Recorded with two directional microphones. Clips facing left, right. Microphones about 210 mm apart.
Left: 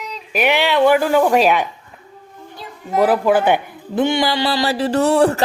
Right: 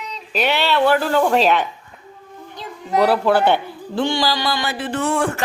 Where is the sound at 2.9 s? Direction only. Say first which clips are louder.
Left 1 dB; 10° left (ahead or behind).